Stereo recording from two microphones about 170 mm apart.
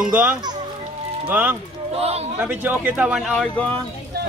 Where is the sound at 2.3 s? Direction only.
10° right (ahead or behind); by 3.8 s 10° left (ahead or behind).